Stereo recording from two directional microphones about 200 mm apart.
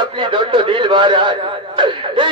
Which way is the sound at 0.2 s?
25° right (ahead or behind).